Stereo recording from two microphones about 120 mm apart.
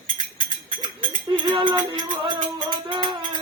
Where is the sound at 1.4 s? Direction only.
45° right (ahead or behind).